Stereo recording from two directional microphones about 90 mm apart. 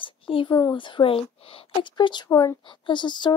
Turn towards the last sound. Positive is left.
turn(degrees=55)  # may be behind; listen again after turning